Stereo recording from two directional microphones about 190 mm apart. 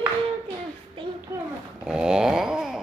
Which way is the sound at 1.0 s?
25° right (ahead or behind).